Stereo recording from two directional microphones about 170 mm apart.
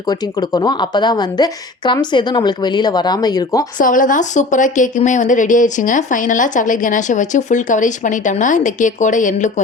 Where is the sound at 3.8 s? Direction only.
50° left (ahead or behind).